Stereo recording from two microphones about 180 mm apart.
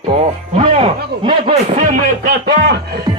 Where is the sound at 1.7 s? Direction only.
45° right (ahead or behind).